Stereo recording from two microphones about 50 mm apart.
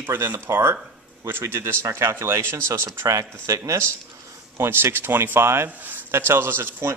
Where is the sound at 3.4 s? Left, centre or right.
Right.